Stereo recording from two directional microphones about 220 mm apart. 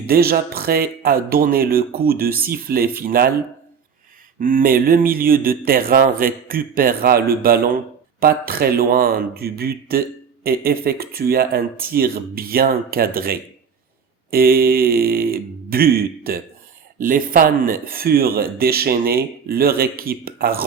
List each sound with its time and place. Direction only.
0.1 s speech: 45° right (ahead or behind)
4.4 s speech: 40° right (ahead or behind)